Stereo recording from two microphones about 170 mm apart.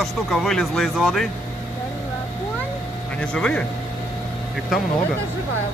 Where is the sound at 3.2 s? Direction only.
5° left (ahead or behind).